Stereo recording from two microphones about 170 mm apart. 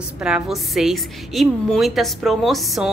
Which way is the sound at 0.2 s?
5° right (ahead or behind).